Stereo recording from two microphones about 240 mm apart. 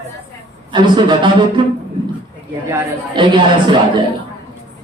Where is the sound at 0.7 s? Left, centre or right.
Centre.